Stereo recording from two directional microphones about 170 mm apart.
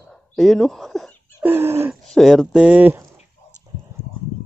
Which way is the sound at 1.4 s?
15° right (ahead or behind).